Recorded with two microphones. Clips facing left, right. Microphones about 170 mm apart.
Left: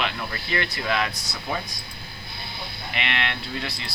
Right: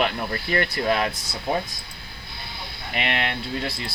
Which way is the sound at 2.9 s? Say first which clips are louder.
Right 3 dB; 40° right (ahead or behind).